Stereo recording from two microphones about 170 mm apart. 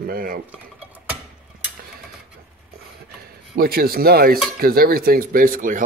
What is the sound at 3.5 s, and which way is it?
Speech, 60° right (ahead or behind).